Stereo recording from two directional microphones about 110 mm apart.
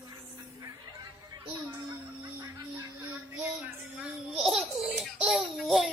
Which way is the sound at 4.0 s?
5° right (ahead or behind).